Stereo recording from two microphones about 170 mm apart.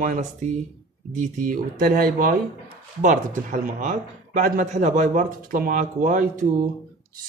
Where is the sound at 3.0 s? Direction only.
50° right (ahead or behind).